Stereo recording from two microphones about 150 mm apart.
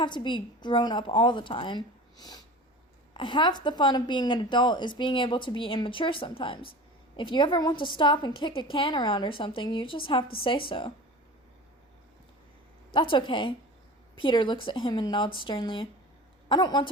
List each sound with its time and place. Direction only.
0.0 s a woman's voice: 30° left (ahead or behind)
12.9 s a woman's voice: 35° left (ahead or behind)